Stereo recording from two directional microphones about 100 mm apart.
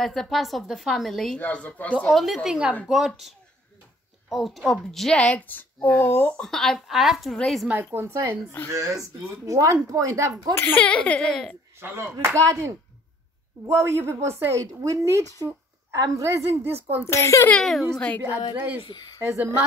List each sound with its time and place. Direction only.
0.0 s a woman's voice: 5° left (ahead or behind)
2.0 s a woman's voice: centre (ahead or behind); by 6.4 s 15° left (ahead or behind)
6.4 s a woman's voice: 5° left (ahead or behind)
7.6 s a woman's voice: 20° right (ahead or behind)
10.5 s speech: 20° left (ahead or behind)
11.8 s a woman's voice: 20° right (ahead or behind)
17.0 s speech: 30° left (ahead or behind)
17.5 s a woman's voice: 5° left (ahead or behind)
18.6 s a woman's voice: 20° right (ahead or behind)
18.9 s speech: 40° left (ahead or behind)
19.2 s a woman's voice: 25° right (ahead or behind)